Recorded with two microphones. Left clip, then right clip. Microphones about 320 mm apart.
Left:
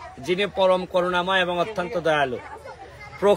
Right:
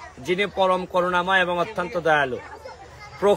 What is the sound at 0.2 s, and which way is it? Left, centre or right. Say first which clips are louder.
A man's voice: even; centre.